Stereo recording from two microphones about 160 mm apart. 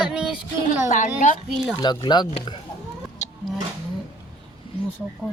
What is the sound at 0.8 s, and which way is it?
Speech, 50° left (ahead or behind).